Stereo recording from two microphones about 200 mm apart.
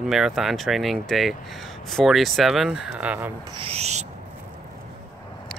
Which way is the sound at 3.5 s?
30° right (ahead or behind).